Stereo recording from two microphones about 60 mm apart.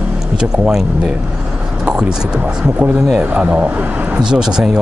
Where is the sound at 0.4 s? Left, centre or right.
Centre.